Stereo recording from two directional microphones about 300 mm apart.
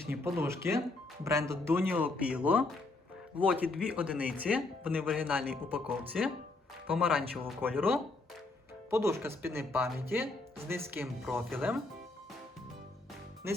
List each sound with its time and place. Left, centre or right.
0.1 s speech: centre
13.4 s speech: centre